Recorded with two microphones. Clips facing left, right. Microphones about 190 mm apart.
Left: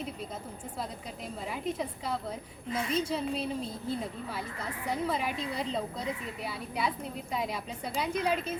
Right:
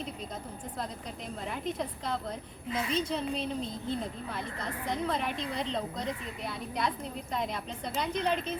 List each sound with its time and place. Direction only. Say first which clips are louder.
1.5 s a woman's voice: left 1 dB; 5° left (ahead or behind)